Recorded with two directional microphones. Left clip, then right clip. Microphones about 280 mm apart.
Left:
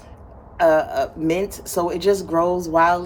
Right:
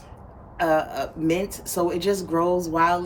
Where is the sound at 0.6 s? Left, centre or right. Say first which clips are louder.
Left 6 dB; centre.